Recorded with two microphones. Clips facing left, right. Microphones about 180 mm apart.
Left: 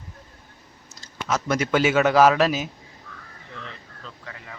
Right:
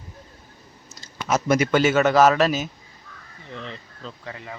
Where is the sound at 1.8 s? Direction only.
10° left (ahead or behind).